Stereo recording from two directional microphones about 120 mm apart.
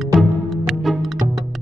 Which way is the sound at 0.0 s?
Centre (ahead or behind).